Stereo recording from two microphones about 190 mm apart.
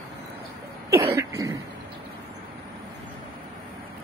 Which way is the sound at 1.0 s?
15° right (ahead or behind).